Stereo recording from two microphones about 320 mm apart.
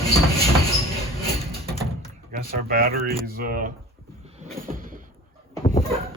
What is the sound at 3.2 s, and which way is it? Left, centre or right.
Speech, right.